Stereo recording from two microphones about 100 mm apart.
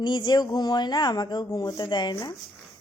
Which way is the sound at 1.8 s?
50° left (ahead or behind).